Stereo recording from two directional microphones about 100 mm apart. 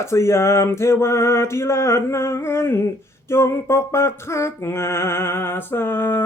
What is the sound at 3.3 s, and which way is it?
Music, 25° left (ahead or behind).